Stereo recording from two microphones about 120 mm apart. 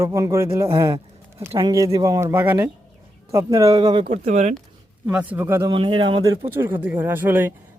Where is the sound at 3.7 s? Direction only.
40° right (ahead or behind).